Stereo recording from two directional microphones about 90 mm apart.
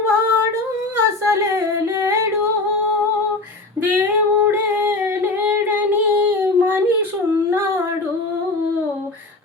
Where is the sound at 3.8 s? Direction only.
20° right (ahead or behind).